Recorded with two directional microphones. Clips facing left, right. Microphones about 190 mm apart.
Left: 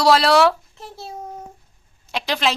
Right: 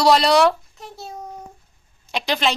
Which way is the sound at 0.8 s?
30° left (ahead or behind).